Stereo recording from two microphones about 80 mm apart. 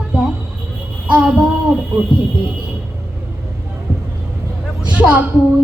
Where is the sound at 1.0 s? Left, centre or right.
Centre.